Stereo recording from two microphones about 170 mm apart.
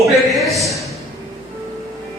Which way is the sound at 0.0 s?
Centre (ahead or behind).